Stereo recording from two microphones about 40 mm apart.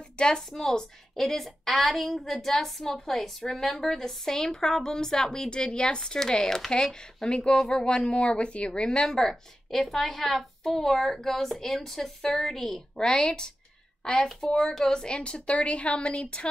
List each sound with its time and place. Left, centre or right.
0.2 s a woman's voice: centre
9.1 s a woman's voice: centre; by 16.4 s left